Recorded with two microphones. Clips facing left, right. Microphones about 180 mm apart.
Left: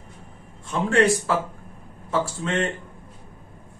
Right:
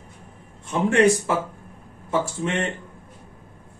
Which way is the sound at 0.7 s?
20° right (ahead or behind).